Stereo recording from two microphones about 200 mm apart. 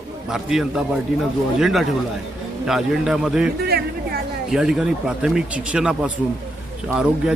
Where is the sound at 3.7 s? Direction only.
50° right (ahead or behind).